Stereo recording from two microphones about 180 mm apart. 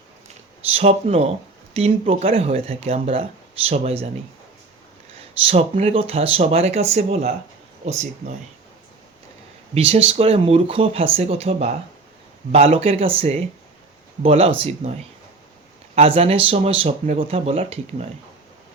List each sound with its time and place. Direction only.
0.7 s speech: 35° right (ahead or behind)
5.5 s speech: 35° right (ahead or behind)
9.7 s speech: 35° right (ahead or behind)
16.0 s speech: 35° right (ahead or behind)